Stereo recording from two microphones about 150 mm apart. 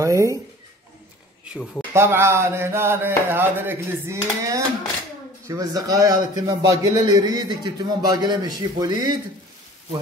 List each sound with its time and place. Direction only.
0.0 s a man's voice: 20° right (ahead or behind)
2.0 s a man's voice: 15° right (ahead or behind)